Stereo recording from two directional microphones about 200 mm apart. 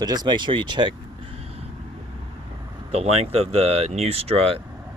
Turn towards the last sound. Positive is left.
turn(degrees=-30)  # may be behind; listen again after turning